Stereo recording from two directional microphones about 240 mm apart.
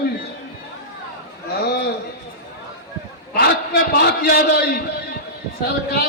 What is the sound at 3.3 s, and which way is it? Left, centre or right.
A man's voice, left.